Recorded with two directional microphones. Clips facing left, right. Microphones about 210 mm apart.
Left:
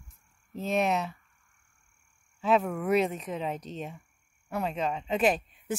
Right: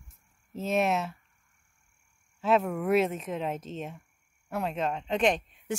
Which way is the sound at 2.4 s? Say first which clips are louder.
Even; centre (ahead or behind).